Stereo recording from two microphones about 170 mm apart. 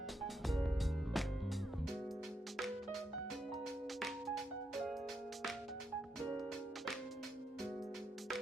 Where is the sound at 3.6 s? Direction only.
Centre (ahead or behind).